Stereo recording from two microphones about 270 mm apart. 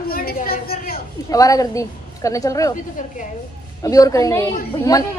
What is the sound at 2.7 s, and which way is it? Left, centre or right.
Speech, left.